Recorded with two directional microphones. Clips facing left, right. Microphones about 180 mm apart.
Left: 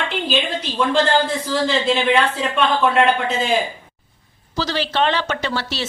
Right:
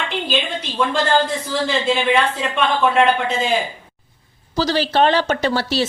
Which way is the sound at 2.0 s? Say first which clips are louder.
Even; 10° right (ahead or behind).